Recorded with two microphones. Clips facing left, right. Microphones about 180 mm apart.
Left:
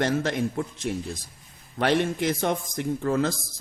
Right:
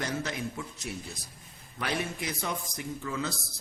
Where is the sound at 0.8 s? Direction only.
65° left (ahead or behind).